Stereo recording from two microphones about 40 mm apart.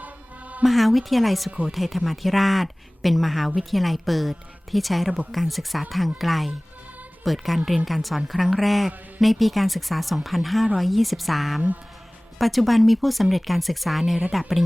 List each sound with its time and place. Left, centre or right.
0.0 s music: right
0.6 s speech: centre